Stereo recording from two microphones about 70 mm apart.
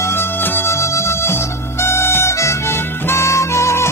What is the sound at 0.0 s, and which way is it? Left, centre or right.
Music, left.